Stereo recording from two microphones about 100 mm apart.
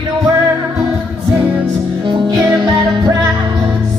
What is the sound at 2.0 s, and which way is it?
Music, 50° right (ahead or behind).